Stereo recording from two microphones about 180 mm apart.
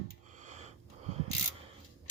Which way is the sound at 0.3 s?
40° right (ahead or behind).